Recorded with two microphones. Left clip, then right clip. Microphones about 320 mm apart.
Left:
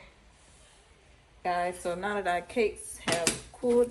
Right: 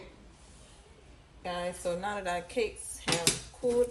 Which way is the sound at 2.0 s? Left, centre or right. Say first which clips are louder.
Left 4 dB; centre.